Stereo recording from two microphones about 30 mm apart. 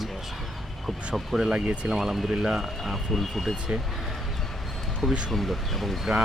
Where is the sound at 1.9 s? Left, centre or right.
Centre.